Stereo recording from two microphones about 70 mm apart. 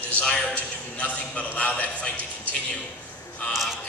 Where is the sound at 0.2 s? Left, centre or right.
Centre.